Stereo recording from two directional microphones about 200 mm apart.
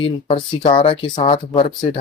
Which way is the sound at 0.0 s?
25° left (ahead or behind).